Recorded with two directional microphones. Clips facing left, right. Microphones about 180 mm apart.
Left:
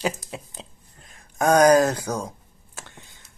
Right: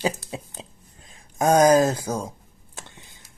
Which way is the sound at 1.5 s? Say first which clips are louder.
Even; 10° right (ahead or behind).